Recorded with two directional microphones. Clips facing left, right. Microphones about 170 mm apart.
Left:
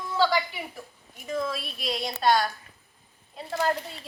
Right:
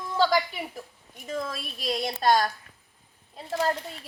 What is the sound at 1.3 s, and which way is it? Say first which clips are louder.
A woman's voice: left 2 dB; 40° right (ahead or behind).